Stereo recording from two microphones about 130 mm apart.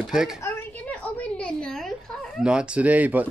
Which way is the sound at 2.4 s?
10° right (ahead or behind).